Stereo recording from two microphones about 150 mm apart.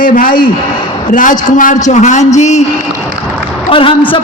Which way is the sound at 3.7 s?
35° left (ahead or behind).